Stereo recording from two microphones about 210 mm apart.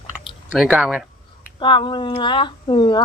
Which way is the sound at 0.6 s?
5° right (ahead or behind).